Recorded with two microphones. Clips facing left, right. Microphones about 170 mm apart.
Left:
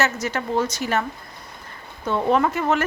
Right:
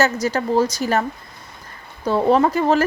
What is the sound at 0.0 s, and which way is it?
A woman's voice, 35° right (ahead or behind).